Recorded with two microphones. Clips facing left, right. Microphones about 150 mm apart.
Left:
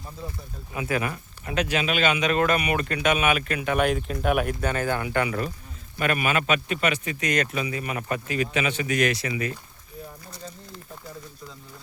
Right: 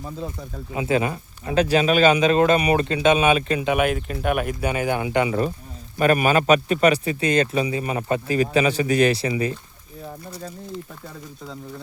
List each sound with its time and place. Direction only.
0.7 s speech: 25° right (ahead or behind)
3.8 s speech: centre (ahead or behind); by 5.4 s 20° right (ahead or behind)
6.0 s speech: 35° right (ahead or behind)